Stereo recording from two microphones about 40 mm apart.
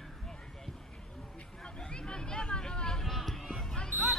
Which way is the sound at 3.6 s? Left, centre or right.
Centre.